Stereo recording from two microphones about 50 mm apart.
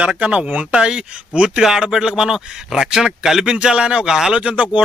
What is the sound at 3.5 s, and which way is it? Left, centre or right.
Speech, centre.